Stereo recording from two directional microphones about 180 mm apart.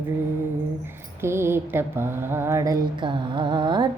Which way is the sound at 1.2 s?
15° right (ahead or behind).